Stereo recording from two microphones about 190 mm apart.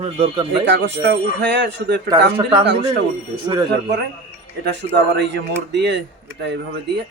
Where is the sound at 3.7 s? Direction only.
65° right (ahead or behind).